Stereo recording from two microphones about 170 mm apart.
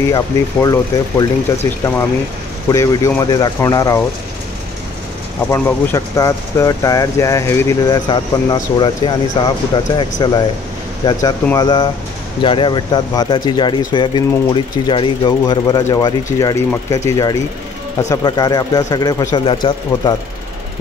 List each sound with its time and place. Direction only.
0.1 s speech: 20° left (ahead or behind)
2.7 s speech: 20° left (ahead or behind)
5.5 s speech: 20° left (ahead or behind)